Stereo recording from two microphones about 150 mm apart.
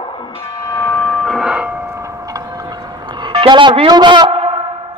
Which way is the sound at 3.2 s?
30° right (ahead or behind).